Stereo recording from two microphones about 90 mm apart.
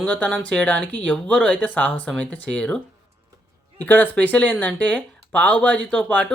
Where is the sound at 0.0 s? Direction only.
15° left (ahead or behind).